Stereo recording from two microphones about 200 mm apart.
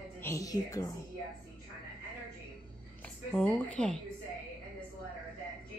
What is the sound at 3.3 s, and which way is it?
Speech, 5° left (ahead or behind).